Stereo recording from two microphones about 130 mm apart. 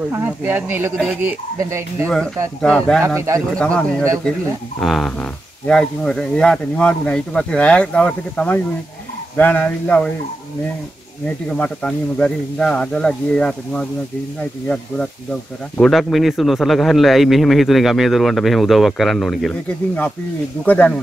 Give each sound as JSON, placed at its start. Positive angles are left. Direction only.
{"t": 0.1, "sound": "speech", "side_deg": -15}
{"t": 2.6, "sound": "speech", "side_deg": 5}
{"t": 3.2, "sound": "speech", "side_deg": -25}
{"t": 3.4, "sound": "speech", "side_deg": 10}
{"t": 11.2, "sound": "speech", "side_deg": 5}
{"t": 15.8, "sound": "speech", "side_deg": 0}
{"t": 20.6, "sound": "speech", "side_deg": 10}